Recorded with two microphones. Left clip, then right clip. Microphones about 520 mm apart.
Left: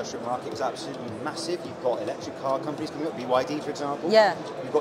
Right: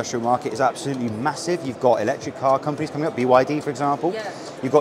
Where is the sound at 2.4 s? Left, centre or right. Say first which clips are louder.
Right 8 dB; right.